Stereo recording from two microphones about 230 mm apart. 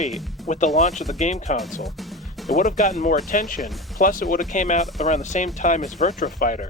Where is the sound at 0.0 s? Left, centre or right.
Centre.